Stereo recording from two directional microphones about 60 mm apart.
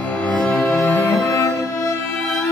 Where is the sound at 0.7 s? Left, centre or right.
Left.